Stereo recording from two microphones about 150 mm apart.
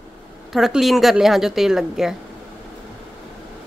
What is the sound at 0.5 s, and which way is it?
A woman's voice, centre (ahead or behind).